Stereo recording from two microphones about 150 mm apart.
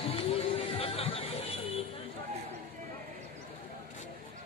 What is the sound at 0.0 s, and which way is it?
Music, 40° left (ahead or behind).